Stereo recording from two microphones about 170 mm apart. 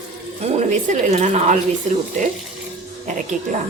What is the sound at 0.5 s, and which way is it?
A woman's voice, 45° right (ahead or behind).